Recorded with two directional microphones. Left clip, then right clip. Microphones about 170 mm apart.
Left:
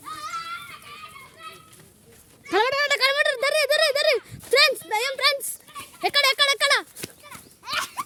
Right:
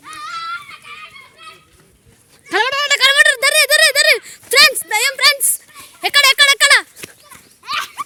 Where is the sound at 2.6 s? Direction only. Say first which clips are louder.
Right 8 dB; 10° left (ahead or behind); by 6.9 s 5° right (ahead or behind).